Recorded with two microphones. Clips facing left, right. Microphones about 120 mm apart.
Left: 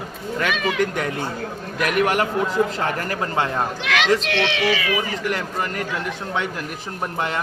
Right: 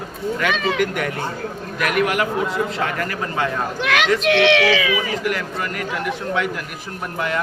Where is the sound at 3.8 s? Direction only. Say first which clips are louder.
Right 2 dB; 50° right (ahead or behind); by 4.8 s 85° right.